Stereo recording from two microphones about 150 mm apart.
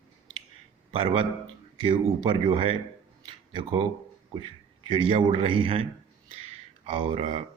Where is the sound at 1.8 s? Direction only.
30° right (ahead or behind).